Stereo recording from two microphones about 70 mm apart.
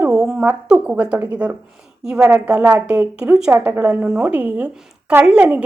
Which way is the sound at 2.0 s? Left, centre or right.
Centre.